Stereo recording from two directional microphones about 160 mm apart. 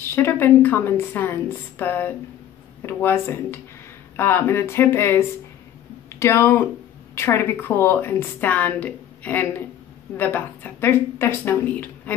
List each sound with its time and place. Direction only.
0.0 s a woman's voice: 15° left (ahead or behind)